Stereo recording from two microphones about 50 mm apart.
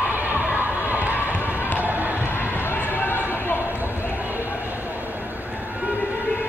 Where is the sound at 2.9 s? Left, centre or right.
Left.